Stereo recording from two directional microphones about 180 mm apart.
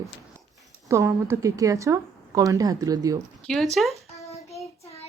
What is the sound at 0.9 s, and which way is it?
A woman's voice, 15° right (ahead or behind).